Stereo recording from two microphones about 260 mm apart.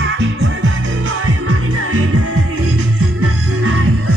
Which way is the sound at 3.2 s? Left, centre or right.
Right.